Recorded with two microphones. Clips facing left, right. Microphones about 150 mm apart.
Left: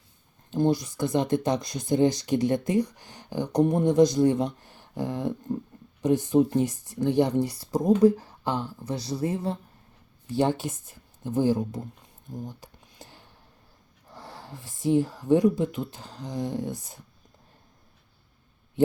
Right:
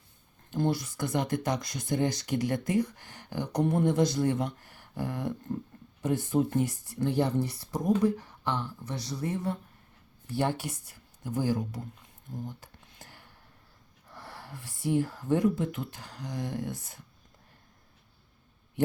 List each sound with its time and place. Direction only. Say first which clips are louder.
0.5 s speech: left 5 dB; 20° left (ahead or behind)
12.3 s a sound: left 2 dB; 15° left (ahead or behind)
14.1 s speech: left 3 dB; 20° left (ahead or behind)